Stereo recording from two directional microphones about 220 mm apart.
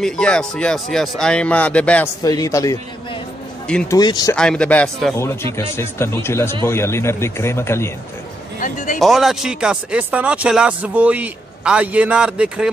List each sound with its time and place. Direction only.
0.0 s speech: 5° left (ahead or behind)
3.6 s speech: 5° left (ahead or behind)
4.0 s speech: 20° left (ahead or behind)
4.4 s speech: 5° left (ahead or behind)
8.5 s a sound: 35° left (ahead or behind)
9.0 s speech: centre (ahead or behind)